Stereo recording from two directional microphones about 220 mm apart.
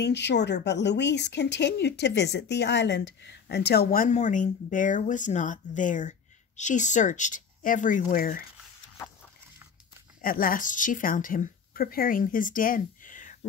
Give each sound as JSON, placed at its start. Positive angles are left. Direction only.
{"t": 0.0, "sound": "speech", "side_deg": 50}
{"t": 10.2, "sound": "speech", "side_deg": 40}